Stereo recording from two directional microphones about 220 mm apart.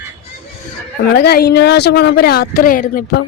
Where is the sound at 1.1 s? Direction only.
45° left (ahead or behind).